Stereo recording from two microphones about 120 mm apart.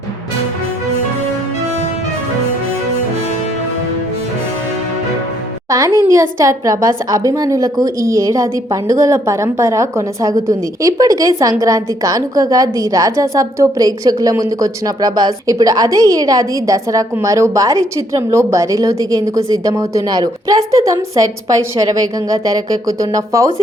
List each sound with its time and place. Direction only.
5.7 s a woman's voice: 30° right (ahead or behind)
22.9 s a woman's voice: 25° right (ahead or behind)